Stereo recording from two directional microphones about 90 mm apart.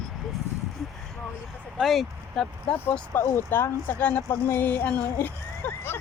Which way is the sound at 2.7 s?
20° left (ahead or behind).